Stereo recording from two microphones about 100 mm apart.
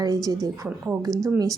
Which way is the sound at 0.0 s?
40° right (ahead or behind).